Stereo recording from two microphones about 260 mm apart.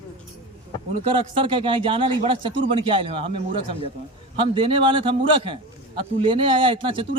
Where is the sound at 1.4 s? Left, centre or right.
Centre.